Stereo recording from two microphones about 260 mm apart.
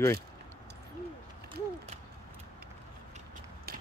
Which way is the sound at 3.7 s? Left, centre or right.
Right.